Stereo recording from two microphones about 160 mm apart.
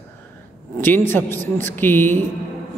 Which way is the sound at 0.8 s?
15° left (ahead or behind).